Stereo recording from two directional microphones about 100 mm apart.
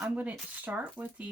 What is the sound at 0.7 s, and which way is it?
Speech, 20° right (ahead or behind).